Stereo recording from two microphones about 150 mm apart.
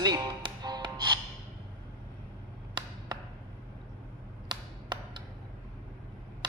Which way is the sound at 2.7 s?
30° right (ahead or behind).